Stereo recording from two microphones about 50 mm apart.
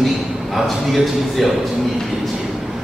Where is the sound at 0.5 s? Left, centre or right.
Centre.